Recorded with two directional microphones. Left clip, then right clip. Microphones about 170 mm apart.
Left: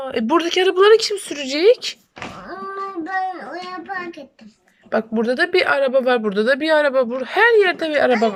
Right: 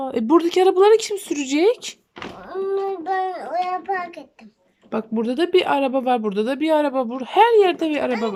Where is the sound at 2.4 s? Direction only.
20° right (ahead or behind).